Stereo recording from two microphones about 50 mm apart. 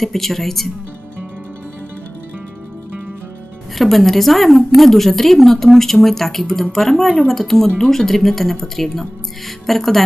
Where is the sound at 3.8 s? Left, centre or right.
Centre.